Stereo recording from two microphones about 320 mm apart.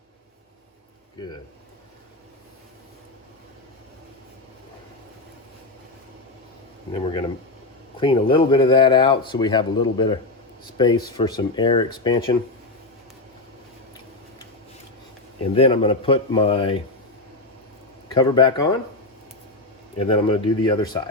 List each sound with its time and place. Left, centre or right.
6.9 s speech: centre
15.5 s speech: centre
18.1 s speech: centre
20.0 s speech: centre